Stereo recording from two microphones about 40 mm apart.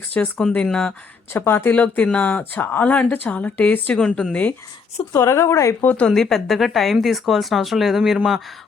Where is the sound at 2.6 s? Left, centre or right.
Left.